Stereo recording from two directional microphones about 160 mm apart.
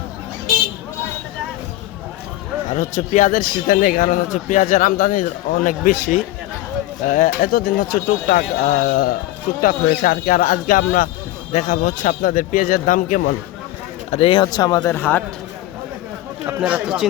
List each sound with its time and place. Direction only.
2.6 s a man's voice: 50° left (ahead or behind)
14.1 s a man's voice: 35° left (ahead or behind)
14.8 s speech: 10° left (ahead or behind)
16.5 s speech: 5° right (ahead or behind)